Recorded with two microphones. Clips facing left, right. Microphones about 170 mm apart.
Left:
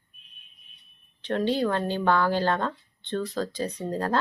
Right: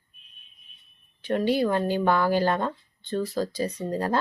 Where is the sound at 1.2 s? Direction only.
10° right (ahead or behind).